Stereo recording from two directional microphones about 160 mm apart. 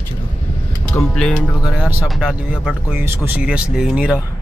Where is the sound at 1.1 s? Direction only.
5° left (ahead or behind).